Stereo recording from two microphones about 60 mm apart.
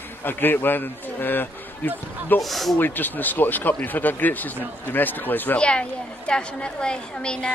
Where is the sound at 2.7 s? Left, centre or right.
Left.